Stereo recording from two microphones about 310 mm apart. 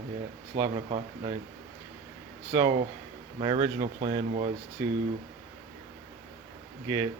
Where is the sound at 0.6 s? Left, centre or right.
Centre.